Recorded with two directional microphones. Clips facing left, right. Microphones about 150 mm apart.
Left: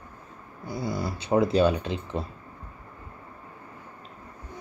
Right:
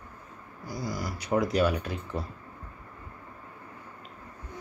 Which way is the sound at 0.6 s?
25° left (ahead or behind).